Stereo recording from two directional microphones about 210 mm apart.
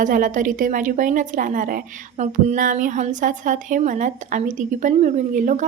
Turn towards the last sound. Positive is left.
turn(degrees=-35)  # may be behind; listen again after turning